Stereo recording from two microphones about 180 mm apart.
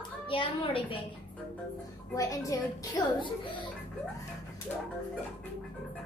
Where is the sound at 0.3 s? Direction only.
30° left (ahead or behind).